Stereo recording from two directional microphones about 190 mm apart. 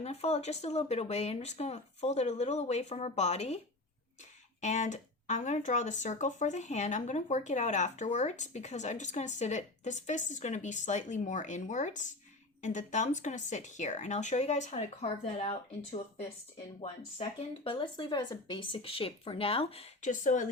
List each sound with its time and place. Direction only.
0.0 s speech: 35° left (ahead or behind)
4.6 s speech: 40° left (ahead or behind)